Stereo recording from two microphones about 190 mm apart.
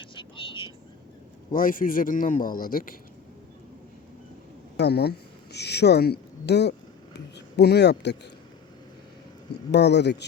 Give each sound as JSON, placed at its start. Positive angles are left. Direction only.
{"t": 0.0, "sound": "vehicle", "side_deg": 25}
{"t": 1.5, "sound": "a man's voice", "side_deg": 45}
{"t": 4.8, "sound": "a woman's voice", "side_deg": 60}
{"t": 9.7, "sound": "speech", "side_deg": 65}